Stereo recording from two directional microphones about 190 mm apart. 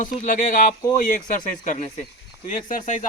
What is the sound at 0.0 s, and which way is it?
Speech, 45° left (ahead or behind).